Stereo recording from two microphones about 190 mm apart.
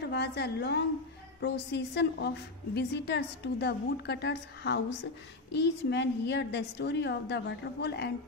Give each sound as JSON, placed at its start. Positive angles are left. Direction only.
{"t": 0.0, "sound": "a woman's voice", "side_deg": 60}